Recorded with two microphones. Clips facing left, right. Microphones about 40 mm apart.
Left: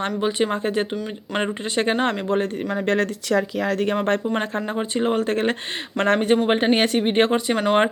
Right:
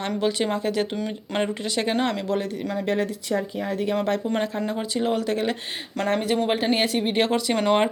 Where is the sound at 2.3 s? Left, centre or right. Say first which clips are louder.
Left 4 dB; left.